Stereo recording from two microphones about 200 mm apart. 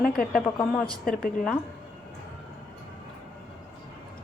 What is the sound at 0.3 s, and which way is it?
Speech, 5° left (ahead or behind).